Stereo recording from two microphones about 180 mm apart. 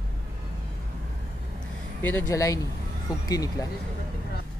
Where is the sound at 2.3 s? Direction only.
20° left (ahead or behind).